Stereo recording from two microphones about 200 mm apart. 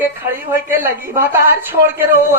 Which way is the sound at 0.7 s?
10° right (ahead or behind).